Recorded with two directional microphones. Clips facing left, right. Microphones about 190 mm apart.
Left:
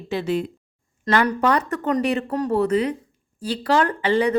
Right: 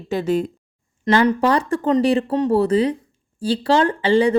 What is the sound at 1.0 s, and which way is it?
Speech, 25° right (ahead or behind).